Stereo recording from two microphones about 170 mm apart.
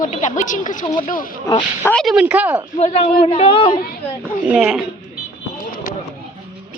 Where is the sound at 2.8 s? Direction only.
35° left (ahead or behind).